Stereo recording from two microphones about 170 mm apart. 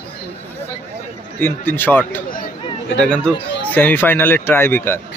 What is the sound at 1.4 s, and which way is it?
A man's voice, 10° left (ahead or behind).